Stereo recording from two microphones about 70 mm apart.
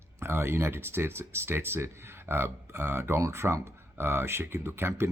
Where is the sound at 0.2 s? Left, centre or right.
Right.